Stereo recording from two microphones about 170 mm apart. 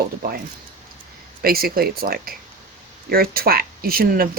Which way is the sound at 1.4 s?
60° right (ahead or behind).